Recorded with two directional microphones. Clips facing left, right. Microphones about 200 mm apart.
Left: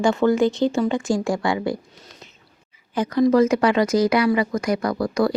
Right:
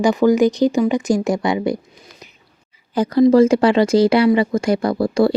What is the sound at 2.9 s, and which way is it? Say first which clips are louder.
Speech: right 5 dB; 35° right (ahead or behind).